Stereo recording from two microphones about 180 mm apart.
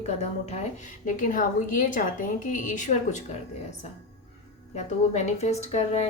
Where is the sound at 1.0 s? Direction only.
50° left (ahead or behind).